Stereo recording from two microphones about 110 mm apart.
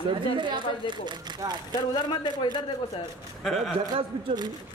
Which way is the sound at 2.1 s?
45° left (ahead or behind).